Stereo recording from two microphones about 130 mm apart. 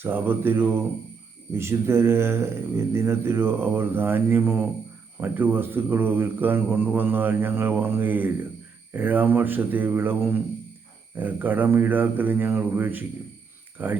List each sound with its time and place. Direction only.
0.0 s speech: 15° right (ahead or behind)